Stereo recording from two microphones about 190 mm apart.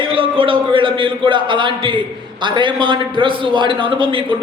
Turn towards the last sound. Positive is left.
turn(degrees=-25)  # may be behind; listen again after turning